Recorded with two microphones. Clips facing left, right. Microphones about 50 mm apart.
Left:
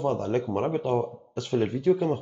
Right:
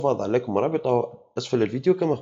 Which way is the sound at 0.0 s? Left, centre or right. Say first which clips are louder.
Right 4 dB; right.